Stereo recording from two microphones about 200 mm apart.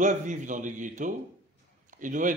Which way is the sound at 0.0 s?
40° right (ahead or behind).